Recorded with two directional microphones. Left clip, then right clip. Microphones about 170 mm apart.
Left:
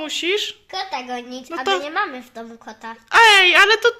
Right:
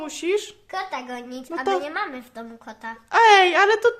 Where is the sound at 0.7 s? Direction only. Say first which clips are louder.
Left 3 dB; 30° left (ahead or behind).